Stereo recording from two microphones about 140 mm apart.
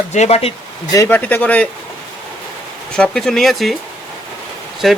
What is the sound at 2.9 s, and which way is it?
Speech, 5° left (ahead or behind).